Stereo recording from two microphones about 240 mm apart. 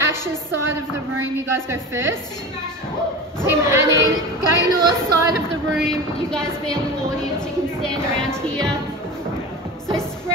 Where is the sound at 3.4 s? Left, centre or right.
Centre.